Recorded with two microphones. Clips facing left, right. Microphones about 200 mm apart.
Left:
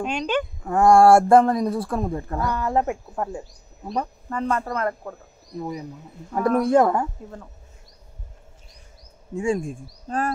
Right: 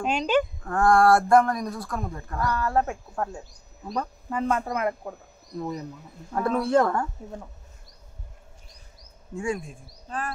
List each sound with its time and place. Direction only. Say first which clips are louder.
0.0 s speech: right 1 dB; 5° right (ahead or behind)
0.7 s speech: left 6 dB; 25° left (ahead or behind)
2.9 s speech: left 4 dB; centre (ahead or behind)
5.6 s speech: left 1 dB; 10° left (ahead or behind)
9.3 s speech: left 5 dB; 25° left (ahead or behind)
9.6 s speech: left 10 dB; 45° left (ahead or behind)